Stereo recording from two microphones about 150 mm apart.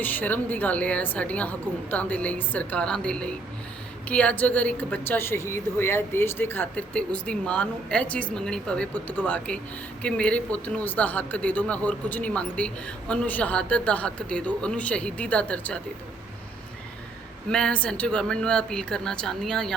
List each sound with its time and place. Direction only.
0.0 s speech: 10° left (ahead or behind)
17.5 s speech: 5° left (ahead or behind)